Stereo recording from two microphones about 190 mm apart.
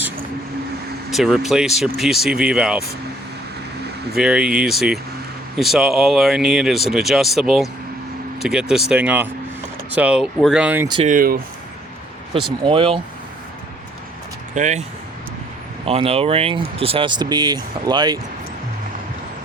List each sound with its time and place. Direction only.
1.1 s speech: centre (ahead or behind)
4.1 s speech: 5° right (ahead or behind)
11.0 s speech: 45° right (ahead or behind)
12.6 s speech: 25° right (ahead or behind)
14.5 s speech: 40° right (ahead or behind)
15.9 s speech: 30° right (ahead or behind)